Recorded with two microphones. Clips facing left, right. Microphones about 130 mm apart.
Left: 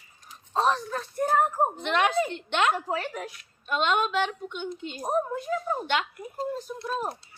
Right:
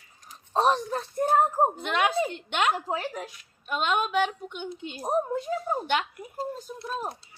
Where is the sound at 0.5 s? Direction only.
20° right (ahead or behind).